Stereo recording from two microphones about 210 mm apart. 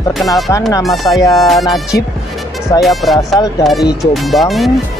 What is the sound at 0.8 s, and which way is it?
Speech, centre (ahead or behind).